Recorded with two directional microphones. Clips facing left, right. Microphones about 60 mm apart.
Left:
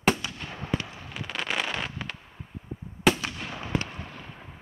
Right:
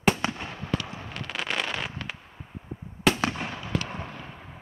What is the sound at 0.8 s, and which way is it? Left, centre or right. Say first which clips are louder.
Fireworks: right 3 dB; right.